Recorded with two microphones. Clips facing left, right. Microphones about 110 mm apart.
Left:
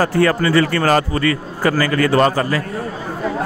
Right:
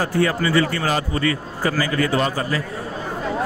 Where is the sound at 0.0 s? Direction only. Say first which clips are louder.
Left 4 dB; 70° left (ahead or behind).